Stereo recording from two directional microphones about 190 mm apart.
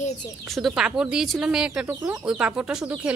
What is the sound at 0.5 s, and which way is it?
A woman's voice, centre (ahead or behind).